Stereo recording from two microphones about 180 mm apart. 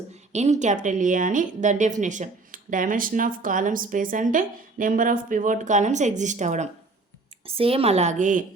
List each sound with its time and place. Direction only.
0.3 s a woman's voice: 40° right (ahead or behind)